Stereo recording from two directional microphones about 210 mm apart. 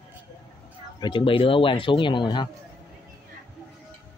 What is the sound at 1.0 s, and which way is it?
Speech, 25° left (ahead or behind).